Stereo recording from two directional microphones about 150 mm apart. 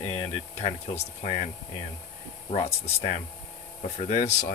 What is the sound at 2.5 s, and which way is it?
Speech, 45° left (ahead or behind).